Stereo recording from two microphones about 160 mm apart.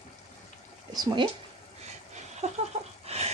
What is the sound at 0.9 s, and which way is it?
Speech, 25° right (ahead or behind).